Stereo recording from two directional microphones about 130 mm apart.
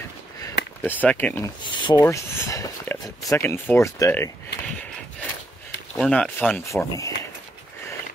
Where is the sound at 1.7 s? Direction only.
35° left (ahead or behind).